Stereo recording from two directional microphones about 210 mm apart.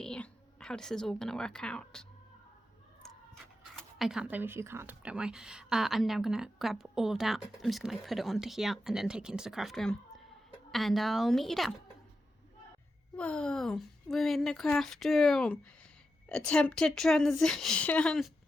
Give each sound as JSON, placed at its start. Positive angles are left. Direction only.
{"t": 0.0, "sound": "a woman's voice", "side_deg": 5}
{"t": 3.8, "sound": "speech", "side_deg": 0}
{"t": 13.1, "sound": "speech", "side_deg": 5}